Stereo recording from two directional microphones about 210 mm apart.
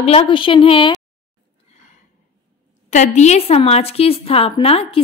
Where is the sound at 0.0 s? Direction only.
30° left (ahead or behind).